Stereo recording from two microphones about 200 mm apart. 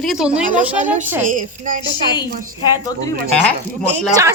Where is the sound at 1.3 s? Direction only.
40° right (ahead or behind).